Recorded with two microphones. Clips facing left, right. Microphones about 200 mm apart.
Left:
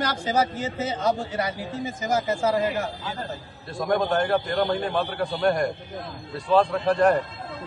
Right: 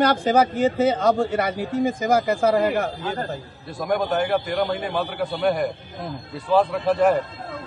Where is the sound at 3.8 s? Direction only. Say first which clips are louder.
Right 1 dB; 5° right (ahead or behind).